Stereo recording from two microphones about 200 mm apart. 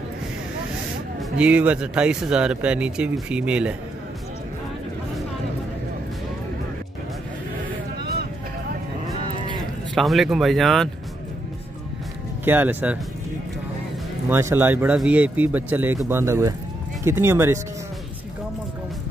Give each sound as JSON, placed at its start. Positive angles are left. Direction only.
{"t": 1.4, "sound": "speech", "side_deg": -5}
{"t": 9.9, "sound": "speech", "side_deg": 0}
{"t": 12.4, "sound": "speech", "side_deg": -10}
{"t": 14.3, "sound": "speech", "side_deg": -10}